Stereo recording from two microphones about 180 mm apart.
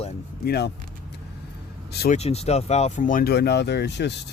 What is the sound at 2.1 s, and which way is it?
Speech, 35° left (ahead or behind).